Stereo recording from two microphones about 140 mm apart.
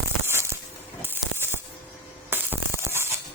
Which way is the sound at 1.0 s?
15° right (ahead or behind).